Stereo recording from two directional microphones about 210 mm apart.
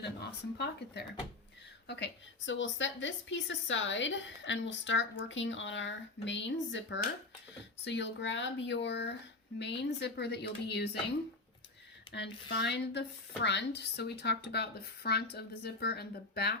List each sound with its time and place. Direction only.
0.0 s speech: 55° left (ahead or behind)
2.5 s a woman's voice: 60° left (ahead or behind)
12.1 s speech: 55° left (ahead or behind)